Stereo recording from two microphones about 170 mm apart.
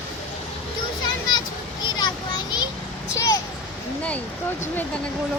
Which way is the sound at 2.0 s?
25° left (ahead or behind).